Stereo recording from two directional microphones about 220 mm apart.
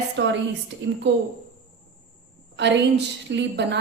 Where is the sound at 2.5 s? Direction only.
50° right (ahead or behind).